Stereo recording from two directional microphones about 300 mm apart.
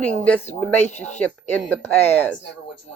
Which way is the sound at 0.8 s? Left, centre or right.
Left.